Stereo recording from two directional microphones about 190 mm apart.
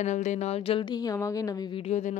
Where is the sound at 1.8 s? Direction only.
40° left (ahead or behind).